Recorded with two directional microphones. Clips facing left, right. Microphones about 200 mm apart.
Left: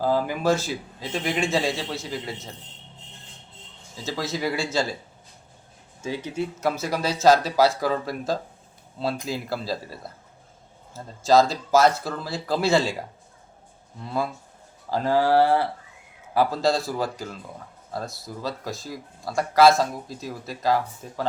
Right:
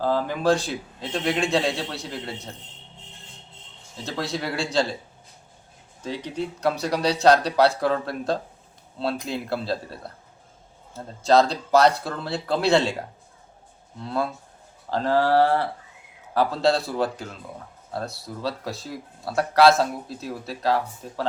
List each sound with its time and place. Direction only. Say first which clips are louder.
0.0 s a man's voice: even; 10° left (ahead or behind)
4.0 s a man's voice: left 1 dB; centre (ahead or behind)
6.0 s a man's voice: left 1 dB; 5° left (ahead or behind)
14.8 s a man's voice: even; 10° left (ahead or behind)
18.4 s a man's voice: right 2 dB; centre (ahead or behind)